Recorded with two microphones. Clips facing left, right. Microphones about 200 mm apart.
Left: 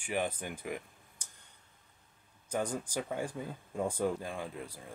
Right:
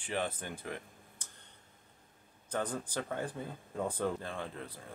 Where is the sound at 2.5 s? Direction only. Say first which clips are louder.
Left 2 dB; 10° left (ahead or behind).